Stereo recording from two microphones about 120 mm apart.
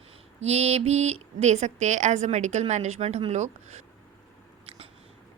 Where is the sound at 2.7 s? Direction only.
70° right (ahead or behind).